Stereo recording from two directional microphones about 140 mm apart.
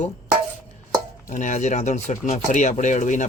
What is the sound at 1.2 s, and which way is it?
Speech, 60° left (ahead or behind).